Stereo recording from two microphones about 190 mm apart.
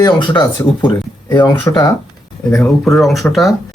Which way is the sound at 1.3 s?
10° left (ahead or behind).